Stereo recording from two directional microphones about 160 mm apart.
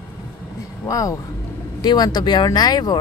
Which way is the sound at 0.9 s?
20° left (ahead or behind).